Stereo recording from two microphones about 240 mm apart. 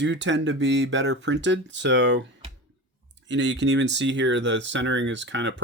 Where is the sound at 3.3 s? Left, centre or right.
Right.